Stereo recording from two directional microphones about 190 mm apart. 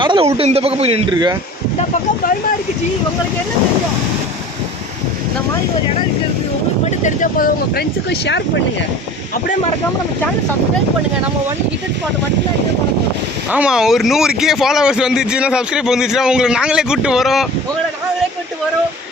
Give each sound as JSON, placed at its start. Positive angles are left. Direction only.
{"t": 0.0, "sound": "speech", "side_deg": -25}
{"t": 7.0, "sound": "speech", "side_deg": 45}
{"t": 13.5, "sound": "speech", "side_deg": -5}